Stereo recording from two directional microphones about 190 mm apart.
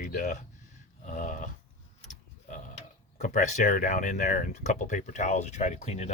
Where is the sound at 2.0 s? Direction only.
40° left (ahead or behind).